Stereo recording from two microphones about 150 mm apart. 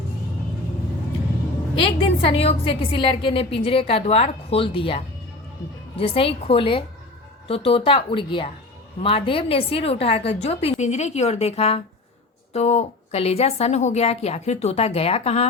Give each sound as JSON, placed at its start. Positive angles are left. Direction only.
{"t": 1.8, "sound": "a woman's voice", "side_deg": 40}